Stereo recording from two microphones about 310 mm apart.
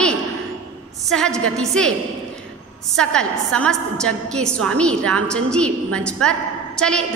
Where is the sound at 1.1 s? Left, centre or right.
Centre.